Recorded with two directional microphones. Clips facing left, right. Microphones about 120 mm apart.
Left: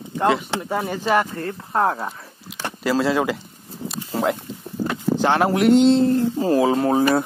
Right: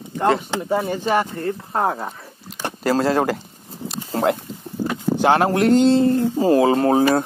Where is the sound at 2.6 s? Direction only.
40° right (ahead or behind).